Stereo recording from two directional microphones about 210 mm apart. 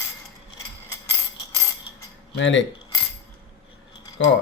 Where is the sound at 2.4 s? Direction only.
60° left (ahead or behind).